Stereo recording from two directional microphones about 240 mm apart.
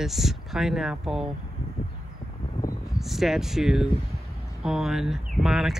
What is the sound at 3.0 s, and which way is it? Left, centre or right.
Speech, centre.